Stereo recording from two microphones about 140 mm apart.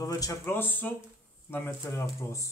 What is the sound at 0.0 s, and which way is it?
Speech, 25° left (ahead or behind).